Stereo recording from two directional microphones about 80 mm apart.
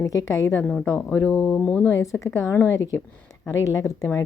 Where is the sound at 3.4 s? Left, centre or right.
Left.